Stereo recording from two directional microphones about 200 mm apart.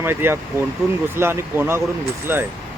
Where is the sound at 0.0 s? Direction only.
10° right (ahead or behind).